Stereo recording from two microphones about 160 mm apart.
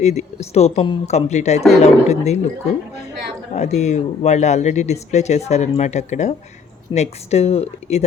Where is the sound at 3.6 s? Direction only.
45° left (ahead or behind).